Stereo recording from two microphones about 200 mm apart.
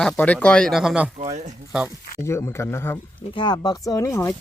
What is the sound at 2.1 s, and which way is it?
Speech, 15° left (ahead or behind).